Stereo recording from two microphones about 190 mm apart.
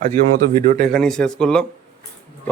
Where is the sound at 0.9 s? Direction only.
5° left (ahead or behind).